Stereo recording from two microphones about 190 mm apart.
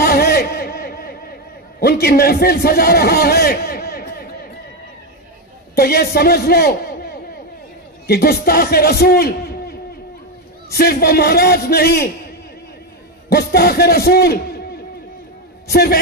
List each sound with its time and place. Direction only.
0.0 s a sound: 55° left (ahead or behind)
1.8 s a man's voice: 55° left (ahead or behind)
5.8 s a man's voice: 55° left (ahead or behind)
8.1 s a man's voice: 55° left (ahead or behind)
13.3 s a man's voice: 55° left (ahead or behind)
15.7 s a man's voice: 55° left (ahead or behind)